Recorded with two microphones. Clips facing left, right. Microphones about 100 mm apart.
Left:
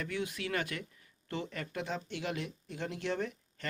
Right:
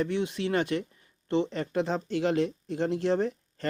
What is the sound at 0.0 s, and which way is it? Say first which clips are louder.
Speech: right 9 dB; 25° right (ahead or behind).